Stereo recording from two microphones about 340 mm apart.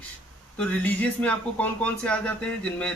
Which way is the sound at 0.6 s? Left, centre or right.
Centre.